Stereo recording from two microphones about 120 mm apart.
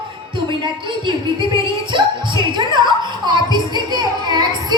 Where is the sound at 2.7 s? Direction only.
40° right (ahead or behind).